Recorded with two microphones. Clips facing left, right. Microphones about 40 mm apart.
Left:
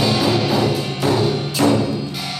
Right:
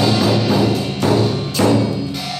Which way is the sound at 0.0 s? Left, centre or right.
Centre.